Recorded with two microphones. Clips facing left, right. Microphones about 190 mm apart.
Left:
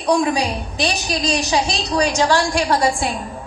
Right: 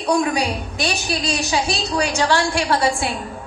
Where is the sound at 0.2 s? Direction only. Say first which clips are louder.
Left 1 dB; 35° left (ahead or behind).